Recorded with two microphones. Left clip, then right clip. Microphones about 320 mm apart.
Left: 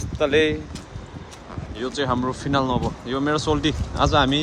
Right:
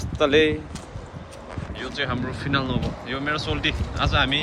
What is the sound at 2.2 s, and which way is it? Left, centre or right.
Speech, centre.